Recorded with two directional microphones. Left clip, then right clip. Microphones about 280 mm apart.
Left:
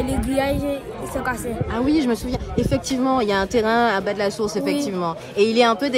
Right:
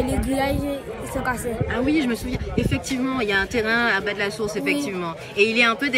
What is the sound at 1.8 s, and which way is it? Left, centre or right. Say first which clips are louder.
Speech: left 4 dB; centre.